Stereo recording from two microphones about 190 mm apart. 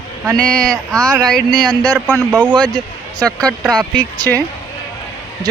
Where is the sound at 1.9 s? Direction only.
5° right (ahead or behind).